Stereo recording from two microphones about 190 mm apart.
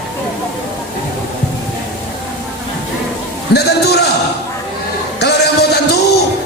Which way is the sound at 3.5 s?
60° left (ahead or behind).